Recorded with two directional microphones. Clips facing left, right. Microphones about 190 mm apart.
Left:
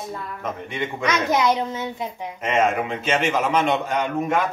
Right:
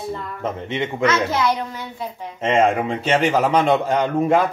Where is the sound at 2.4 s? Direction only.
30° right (ahead or behind).